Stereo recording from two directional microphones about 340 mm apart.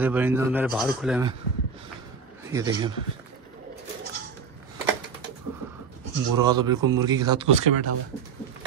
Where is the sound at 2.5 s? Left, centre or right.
Centre.